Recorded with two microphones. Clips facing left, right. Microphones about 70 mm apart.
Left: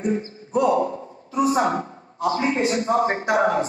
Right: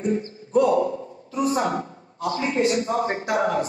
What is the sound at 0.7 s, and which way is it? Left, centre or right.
A woman's voice, left.